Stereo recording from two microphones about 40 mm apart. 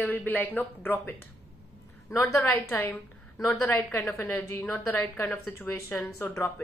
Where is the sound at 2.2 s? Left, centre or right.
Left.